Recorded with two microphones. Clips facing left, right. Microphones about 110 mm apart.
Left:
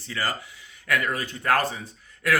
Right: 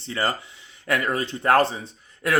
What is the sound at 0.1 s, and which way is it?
Speech, 25° right (ahead or behind).